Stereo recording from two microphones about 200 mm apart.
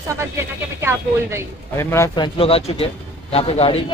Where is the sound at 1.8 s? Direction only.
15° left (ahead or behind).